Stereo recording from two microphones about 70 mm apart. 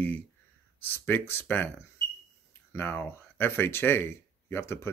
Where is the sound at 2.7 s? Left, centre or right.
Left.